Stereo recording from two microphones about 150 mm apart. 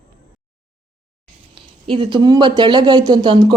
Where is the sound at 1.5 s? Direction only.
35° right (ahead or behind).